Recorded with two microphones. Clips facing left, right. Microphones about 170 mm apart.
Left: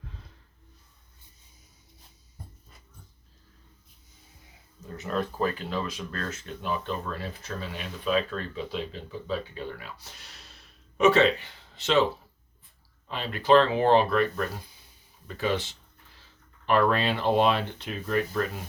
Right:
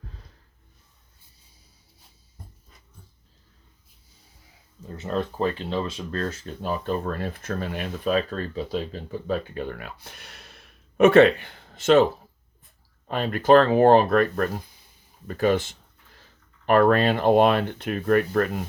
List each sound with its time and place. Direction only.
4.9 s speech: 30° right (ahead or behind); by 12.0 s 50° right (ahead or behind)
13.1 s speech: 50° right (ahead or behind)
15.3 s a sound: 50° right (ahead or behind)
16.6 s speech: 50° right (ahead or behind)